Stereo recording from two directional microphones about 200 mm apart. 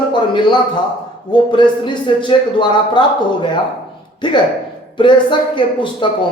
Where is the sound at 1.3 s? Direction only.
20° left (ahead or behind).